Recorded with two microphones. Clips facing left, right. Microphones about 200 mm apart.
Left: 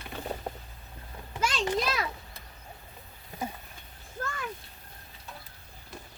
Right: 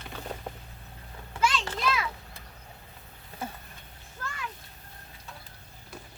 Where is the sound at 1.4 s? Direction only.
45° left (ahead or behind).